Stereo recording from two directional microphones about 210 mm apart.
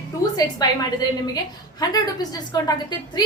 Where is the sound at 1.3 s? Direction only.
20° left (ahead or behind).